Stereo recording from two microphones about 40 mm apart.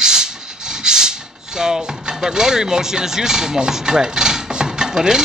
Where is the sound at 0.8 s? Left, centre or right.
Centre.